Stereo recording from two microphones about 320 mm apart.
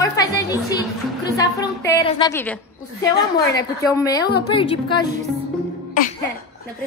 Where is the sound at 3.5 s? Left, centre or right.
Centre.